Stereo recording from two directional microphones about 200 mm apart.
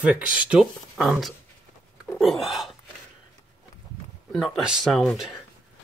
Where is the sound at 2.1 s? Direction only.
Centre (ahead or behind).